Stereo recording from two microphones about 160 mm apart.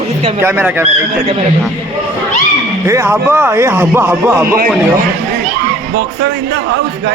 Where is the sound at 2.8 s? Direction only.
15° right (ahead or behind).